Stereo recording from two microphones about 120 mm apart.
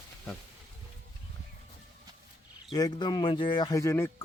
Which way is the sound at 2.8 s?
35° left (ahead or behind).